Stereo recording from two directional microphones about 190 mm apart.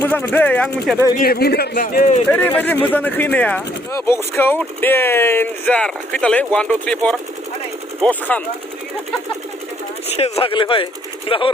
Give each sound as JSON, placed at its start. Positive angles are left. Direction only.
{"t": 0.0, "sound": "speech", "side_deg": 10}
{"t": 1.2, "sound": "speech", "side_deg": 55}
{"t": 2.3, "sound": "speech", "side_deg": 10}
{"t": 10.2, "sound": "speech", "side_deg": 35}